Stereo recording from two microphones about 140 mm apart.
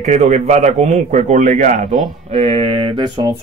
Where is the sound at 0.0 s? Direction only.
55° right (ahead or behind).